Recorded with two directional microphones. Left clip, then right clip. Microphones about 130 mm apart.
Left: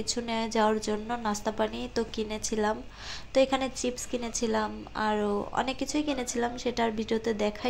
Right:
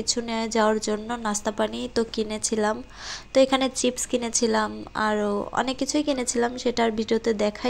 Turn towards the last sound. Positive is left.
turn(degrees=-35)  # may be behind; listen again after turning